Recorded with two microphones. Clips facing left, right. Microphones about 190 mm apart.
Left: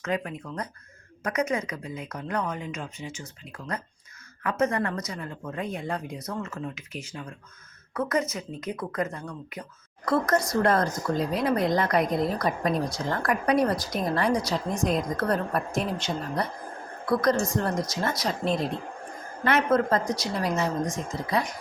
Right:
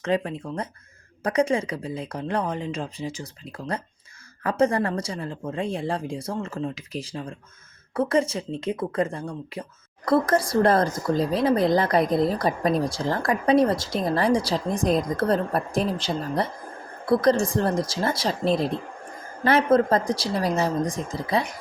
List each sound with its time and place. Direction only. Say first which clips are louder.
0.0 s a woman's voice: right 5 dB; 30° right (ahead or behind)